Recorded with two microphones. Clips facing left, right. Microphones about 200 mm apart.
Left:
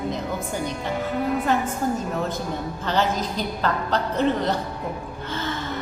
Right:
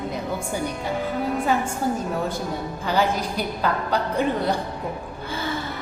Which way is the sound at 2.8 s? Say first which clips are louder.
Right 1 dB; 10° right (ahead or behind).